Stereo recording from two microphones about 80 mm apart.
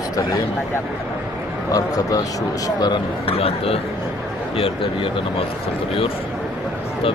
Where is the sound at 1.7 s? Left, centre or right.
Left.